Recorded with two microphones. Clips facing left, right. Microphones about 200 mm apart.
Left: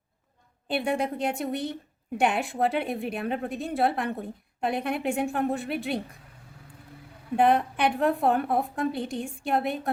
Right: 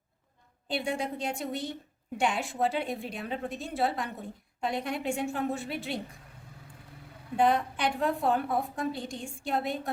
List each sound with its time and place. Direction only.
0.7 s a woman's voice: 60° left (ahead or behind)
7.3 s a woman's voice: 60° left (ahead or behind)